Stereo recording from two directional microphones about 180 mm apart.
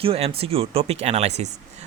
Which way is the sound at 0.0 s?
30° right (ahead or behind).